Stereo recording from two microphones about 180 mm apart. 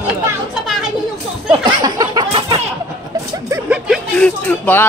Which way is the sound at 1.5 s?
20° right (ahead or behind).